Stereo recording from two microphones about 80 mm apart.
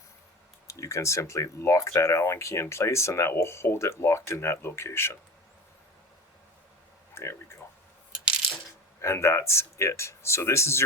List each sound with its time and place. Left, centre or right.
0.7 s speech: left
7.1 s a sound: left
9.0 s speech: left